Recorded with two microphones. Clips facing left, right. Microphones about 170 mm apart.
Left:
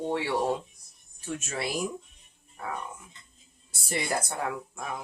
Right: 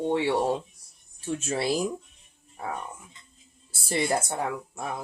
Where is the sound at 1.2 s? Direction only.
30° right (ahead or behind).